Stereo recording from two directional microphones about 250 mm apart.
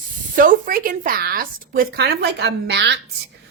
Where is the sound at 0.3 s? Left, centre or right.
Right.